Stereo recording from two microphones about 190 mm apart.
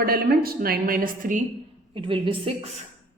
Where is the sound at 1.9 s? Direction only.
25° right (ahead or behind).